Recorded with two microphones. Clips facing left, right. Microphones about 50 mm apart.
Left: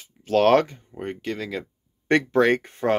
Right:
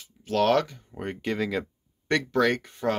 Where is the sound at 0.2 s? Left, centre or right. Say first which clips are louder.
Left 5 dB; left.